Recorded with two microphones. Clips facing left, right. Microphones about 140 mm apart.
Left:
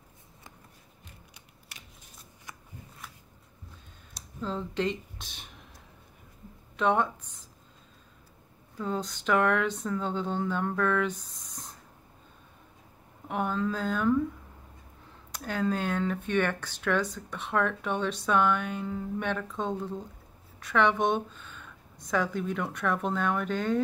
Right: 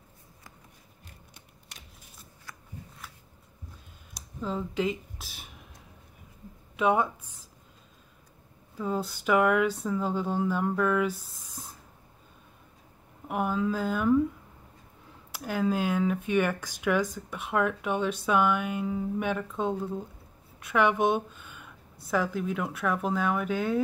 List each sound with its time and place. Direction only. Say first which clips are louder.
2.5 s a sound: left 1 dB; 20° left (ahead or behind)
4.4 s a sound: right 1 dB; 5° right (ahead or behind)
6.8 s speech: right 1 dB; 10° right (ahead or behind)
8.7 s speech: right 2 dB; 5° right (ahead or behind)
13.3 s speech: right 2 dB; 5° right (ahead or behind)
15.3 s a woman's voice: right 2 dB; 5° right (ahead or behind)